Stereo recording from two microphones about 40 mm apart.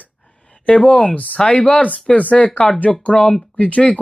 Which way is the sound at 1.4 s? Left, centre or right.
Left.